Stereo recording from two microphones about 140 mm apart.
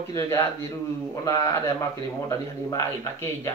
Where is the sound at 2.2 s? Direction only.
20° left (ahead or behind).